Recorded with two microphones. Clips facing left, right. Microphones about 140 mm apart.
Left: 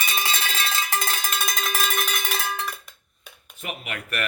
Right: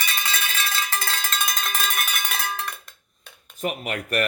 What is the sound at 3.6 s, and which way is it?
Speech, 40° right (ahead or behind).